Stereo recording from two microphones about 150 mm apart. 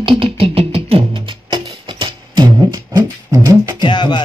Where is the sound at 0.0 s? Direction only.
35° right (ahead or behind).